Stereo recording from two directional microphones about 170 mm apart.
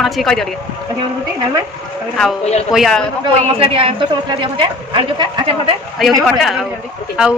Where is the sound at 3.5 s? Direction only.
35° right (ahead or behind).